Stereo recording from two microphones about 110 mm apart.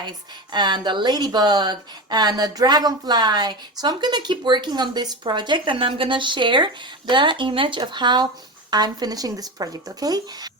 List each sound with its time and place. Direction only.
0.5 s speech: 45° right (ahead or behind)